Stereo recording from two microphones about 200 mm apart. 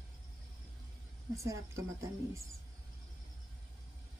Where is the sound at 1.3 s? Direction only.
15° right (ahead or behind).